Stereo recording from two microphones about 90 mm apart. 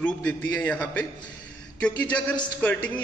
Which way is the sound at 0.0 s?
15° left (ahead or behind).